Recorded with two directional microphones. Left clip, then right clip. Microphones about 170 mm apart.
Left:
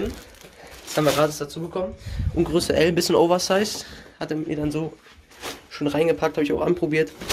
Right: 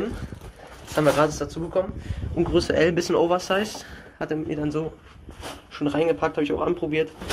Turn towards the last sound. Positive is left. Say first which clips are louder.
# left 2 dB
turn(degrees=45)  # may be behind; listen again after turning